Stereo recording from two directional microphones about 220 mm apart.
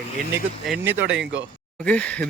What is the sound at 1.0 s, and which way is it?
Speech, 55° right (ahead or behind).